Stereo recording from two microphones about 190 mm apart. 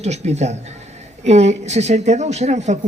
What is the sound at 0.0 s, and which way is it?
Speech, 35° right (ahead or behind).